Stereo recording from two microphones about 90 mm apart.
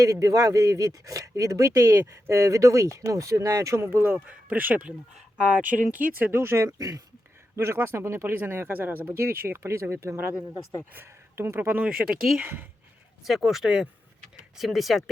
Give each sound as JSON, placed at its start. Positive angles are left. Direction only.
{"t": 0.0, "sound": "speech", "side_deg": -40}
{"t": 7.5, "sound": "speech", "side_deg": -30}
{"t": 10.3, "sound": "speech", "side_deg": 40}
{"t": 10.9, "sound": "speech", "side_deg": -30}
{"t": 11.8, "sound": "speech", "side_deg": -10}